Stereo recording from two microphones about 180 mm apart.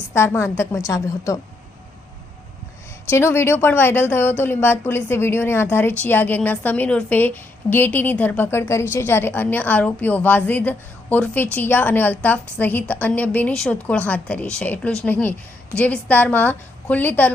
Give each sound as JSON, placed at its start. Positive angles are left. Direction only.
{"t": 0.1, "sound": "a woman's voice", "side_deg": 15}
{"t": 3.1, "sound": "a woman's voice", "side_deg": 15}